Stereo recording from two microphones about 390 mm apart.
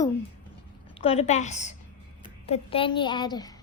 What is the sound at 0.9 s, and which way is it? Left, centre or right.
A woman's voice, centre.